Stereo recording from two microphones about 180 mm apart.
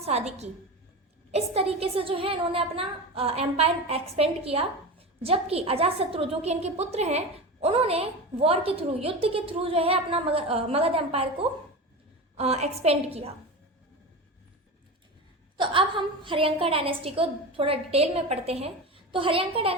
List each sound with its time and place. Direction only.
0.0 s a woman's voice: 35° right (ahead or behind)
15.5 s a woman's voice: 25° right (ahead or behind)